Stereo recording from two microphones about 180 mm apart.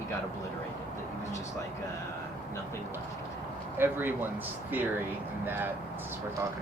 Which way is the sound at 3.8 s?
10° right (ahead or behind).